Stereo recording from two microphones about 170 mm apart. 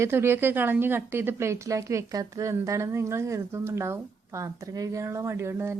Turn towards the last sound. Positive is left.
turn(degrees=-15)  # may be behind; listen again after turning